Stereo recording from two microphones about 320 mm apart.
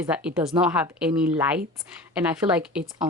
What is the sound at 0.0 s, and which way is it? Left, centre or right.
Speech, centre.